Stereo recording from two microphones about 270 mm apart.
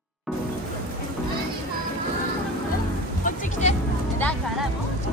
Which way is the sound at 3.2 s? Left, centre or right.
Left.